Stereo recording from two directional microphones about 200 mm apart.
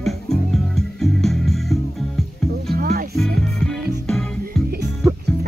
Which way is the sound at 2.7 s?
50° right (ahead or behind).